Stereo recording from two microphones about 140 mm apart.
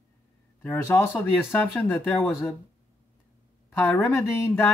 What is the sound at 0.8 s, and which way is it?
Speech, 15° left (ahead or behind).